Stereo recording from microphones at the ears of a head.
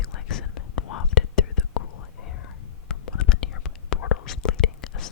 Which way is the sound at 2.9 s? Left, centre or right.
Left.